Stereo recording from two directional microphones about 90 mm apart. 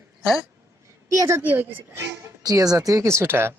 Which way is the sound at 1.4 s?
20° right (ahead or behind).